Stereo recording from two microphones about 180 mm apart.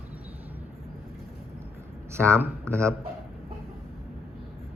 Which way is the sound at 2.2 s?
15° right (ahead or behind).